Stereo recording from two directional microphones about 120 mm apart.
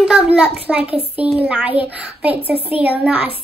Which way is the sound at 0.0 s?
5° right (ahead or behind).